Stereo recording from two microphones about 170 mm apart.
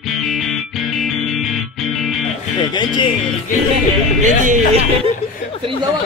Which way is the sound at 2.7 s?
25° left (ahead or behind).